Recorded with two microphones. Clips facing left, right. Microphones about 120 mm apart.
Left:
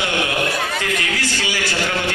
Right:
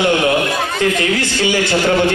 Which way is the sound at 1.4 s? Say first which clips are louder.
Right 8 dB; 25° right (ahead or behind).